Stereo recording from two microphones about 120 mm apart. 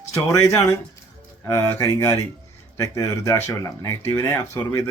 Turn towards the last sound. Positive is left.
turn(degrees=25)  # may be behind; listen again after turning